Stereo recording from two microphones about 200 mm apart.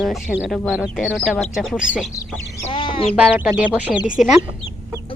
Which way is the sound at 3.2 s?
5° right (ahead or behind).